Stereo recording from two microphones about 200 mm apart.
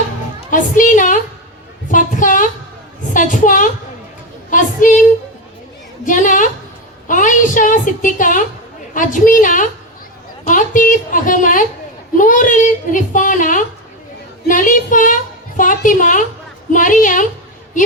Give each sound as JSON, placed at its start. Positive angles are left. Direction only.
{"t": 0.5, "sound": "a woman's voice", "side_deg": 40}
{"t": 6.1, "sound": "a woman's voice", "side_deg": 40}